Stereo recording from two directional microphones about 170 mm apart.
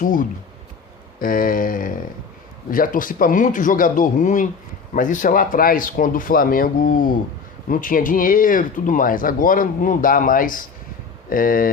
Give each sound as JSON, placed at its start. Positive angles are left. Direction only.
{"t": 0.0, "sound": "speech", "side_deg": 50}